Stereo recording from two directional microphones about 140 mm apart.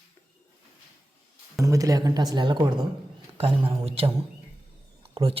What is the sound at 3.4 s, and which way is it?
A man's voice, 40° right (ahead or behind).